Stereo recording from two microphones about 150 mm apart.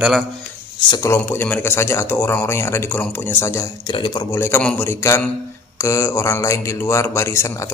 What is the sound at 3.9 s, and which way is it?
Speech, 30° left (ahead or behind).